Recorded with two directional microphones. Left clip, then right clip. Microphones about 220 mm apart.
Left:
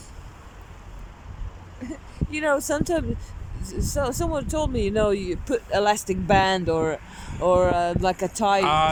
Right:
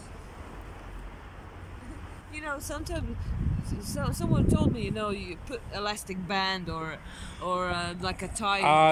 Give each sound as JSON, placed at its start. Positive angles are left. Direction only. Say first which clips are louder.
{"t": 1.8, "sound": "speech", "louder": "left 10 dB", "side_deg": 40}
{"t": 8.6, "sound": "speech", "louder": "right 4 dB", "side_deg": -15}